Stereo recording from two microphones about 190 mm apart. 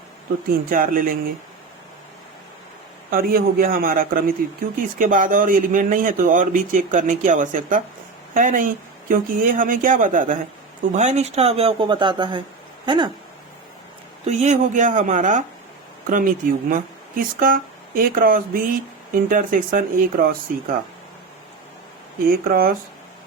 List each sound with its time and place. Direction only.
0.7 s a man's voice: 45° right (ahead or behind)
3.1 s a man's voice: 50° right (ahead or behind); by 13.1 s 25° right (ahead or behind)
14.3 s a man's voice: 40° right (ahead or behind)
22.3 s a man's voice: 50° right (ahead or behind)